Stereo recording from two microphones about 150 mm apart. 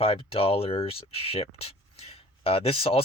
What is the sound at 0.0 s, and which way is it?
Speech, 40° left (ahead or behind).